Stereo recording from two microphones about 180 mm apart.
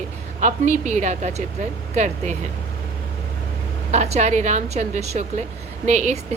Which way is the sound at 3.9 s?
40° right (ahead or behind).